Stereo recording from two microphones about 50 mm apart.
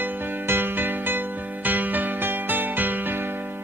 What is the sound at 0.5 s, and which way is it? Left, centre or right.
Music, right.